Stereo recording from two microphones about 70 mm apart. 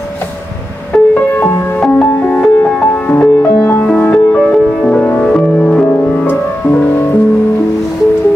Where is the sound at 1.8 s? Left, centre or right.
Centre.